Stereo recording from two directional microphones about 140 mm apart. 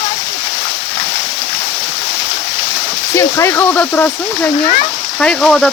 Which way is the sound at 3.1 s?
20° left (ahead or behind).